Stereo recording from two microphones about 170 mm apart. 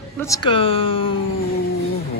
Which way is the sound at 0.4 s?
30° left (ahead or behind).